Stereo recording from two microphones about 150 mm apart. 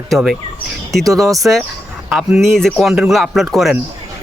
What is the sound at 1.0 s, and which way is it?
Speech, 25° right (ahead or behind).